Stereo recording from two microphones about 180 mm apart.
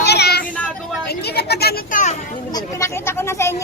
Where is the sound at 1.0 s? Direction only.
60° left (ahead or behind); by 2.1 s 45° left (ahead or behind).